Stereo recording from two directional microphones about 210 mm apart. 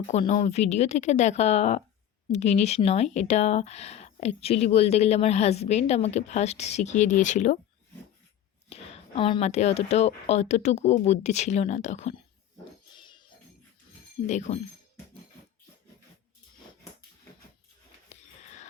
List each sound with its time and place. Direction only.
0.1 s speech: 35° left (ahead or behind)
8.7 s speech: 25° left (ahead or behind)
12.9 s a sound: 20° left (ahead or behind)
14.3 s speech: 35° left (ahead or behind)
18.1 s wheeze: 35° left (ahead or behind)